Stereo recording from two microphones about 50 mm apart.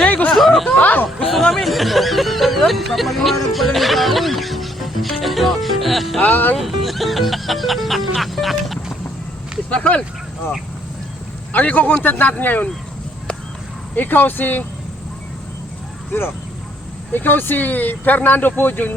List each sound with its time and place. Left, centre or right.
0.0 s a sound: left
0.3 s a sound: centre
0.8 s chatter: left
1.2 s speech: centre
6.1 s speech: left
6.6 s speech: centre
9.6 s speech: left
11.5 s speech: left
13.9 s speech: left
17.1 s speech: left